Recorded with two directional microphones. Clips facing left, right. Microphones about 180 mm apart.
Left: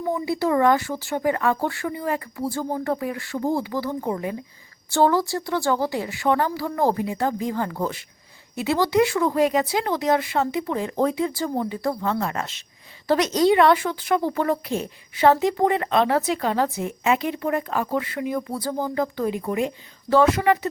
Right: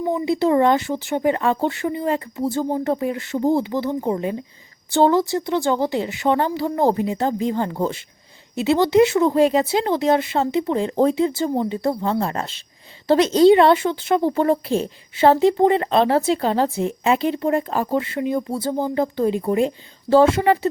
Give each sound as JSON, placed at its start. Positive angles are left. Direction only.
{"t": 0.0, "sound": "a woman's voice", "side_deg": -20}